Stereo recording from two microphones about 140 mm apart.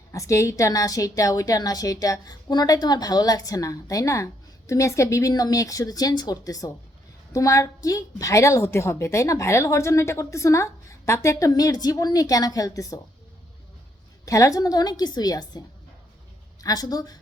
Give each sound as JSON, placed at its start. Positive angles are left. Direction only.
{"t": 0.1, "sound": "a woman's voice", "side_deg": 20}
{"t": 14.3, "sound": "a woman's voice", "side_deg": 25}